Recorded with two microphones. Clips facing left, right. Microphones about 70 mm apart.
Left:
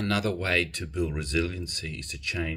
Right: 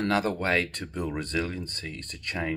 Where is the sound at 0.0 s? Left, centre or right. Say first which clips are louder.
Right 2 dB; right.